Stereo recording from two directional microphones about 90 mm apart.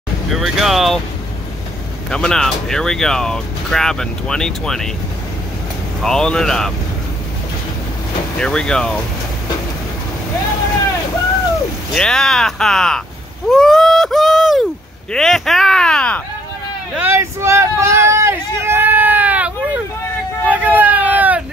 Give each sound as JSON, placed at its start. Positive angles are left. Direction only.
{"t": 0.3, "sound": "speech", "side_deg": -5}
{"t": 2.0, "sound": "speech", "side_deg": 5}
{"t": 6.0, "sound": "speech", "side_deg": 10}
{"t": 8.4, "sound": "speech", "side_deg": 10}
{"t": 11.9, "sound": "speech", "side_deg": 5}
{"t": 13.5, "sound": "a sound", "side_deg": 5}
{"t": 15.1, "sound": "speech", "side_deg": 5}
{"t": 17.0, "sound": "a sound", "side_deg": -30}